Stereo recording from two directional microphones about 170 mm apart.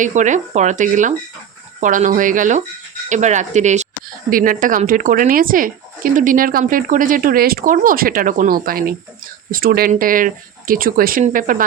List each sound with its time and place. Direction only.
0.0 s speech: 45° right (ahead or behind)
4.3 s speech: 55° right (ahead or behind)